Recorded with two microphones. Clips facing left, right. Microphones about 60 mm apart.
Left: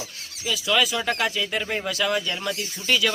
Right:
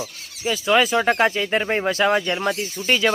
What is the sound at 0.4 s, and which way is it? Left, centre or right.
Speech, right.